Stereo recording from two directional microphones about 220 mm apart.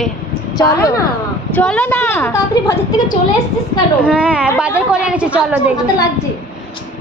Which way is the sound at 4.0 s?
5° right (ahead or behind).